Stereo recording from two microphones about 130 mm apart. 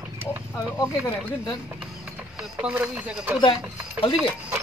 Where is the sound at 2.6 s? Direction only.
10° right (ahead or behind).